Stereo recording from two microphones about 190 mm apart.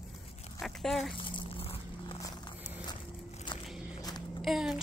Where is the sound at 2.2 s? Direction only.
20° left (ahead or behind).